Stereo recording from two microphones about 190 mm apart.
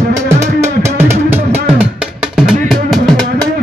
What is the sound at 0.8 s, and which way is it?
Music, 10° right (ahead or behind).